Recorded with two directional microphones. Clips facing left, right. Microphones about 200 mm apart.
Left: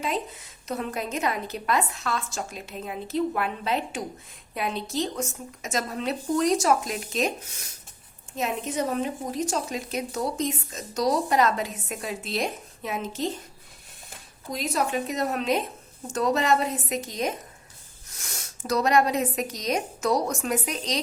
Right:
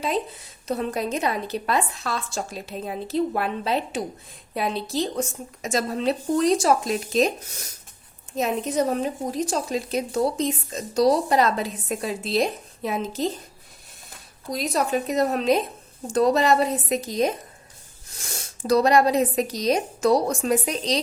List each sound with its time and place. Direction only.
0.7 s a woman's voice: 35° right (ahead or behind)
8.4 s a woman's voice: 35° right (ahead or behind)
14.5 s a woman's voice: 35° right (ahead or behind)